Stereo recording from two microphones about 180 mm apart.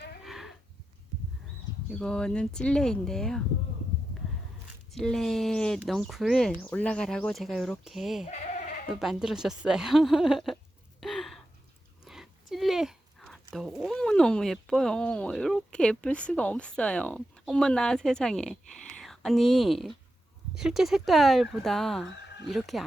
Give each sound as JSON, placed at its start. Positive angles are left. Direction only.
{"t": 0.3, "sound": "cattle", "side_deg": 0}
{"t": 1.9, "sound": "speech", "side_deg": 5}
{"t": 4.9, "sound": "speech", "side_deg": 0}
{"t": 11.0, "sound": "gasp", "side_deg": 0}
{"t": 12.0, "sound": "a sound", "side_deg": 0}
{"t": 13.5, "sound": "speech", "side_deg": 0}